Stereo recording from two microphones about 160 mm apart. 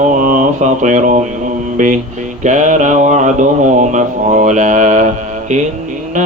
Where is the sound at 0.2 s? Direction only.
55° right (ahead or behind).